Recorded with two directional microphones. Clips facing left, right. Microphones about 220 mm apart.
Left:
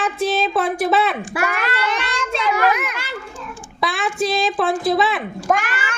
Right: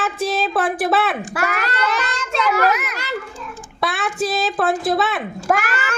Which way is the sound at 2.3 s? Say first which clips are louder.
Right 1 dB; 40° right (ahead or behind).